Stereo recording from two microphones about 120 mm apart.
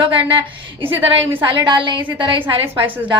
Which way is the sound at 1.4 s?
40° right (ahead or behind).